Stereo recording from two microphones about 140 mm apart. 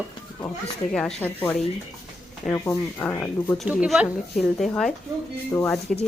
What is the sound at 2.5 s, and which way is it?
Speech, 20° left (ahead or behind).